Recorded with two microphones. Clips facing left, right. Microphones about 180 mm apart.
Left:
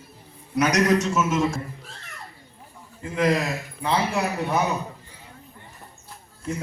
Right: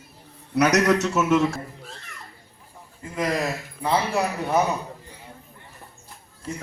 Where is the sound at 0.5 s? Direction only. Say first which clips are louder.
Right 1 dB; 70° right (ahead or behind).